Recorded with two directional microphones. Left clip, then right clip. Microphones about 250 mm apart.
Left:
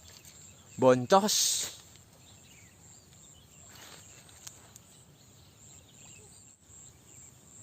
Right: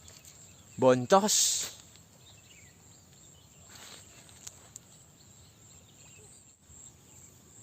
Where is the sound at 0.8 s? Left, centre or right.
Centre.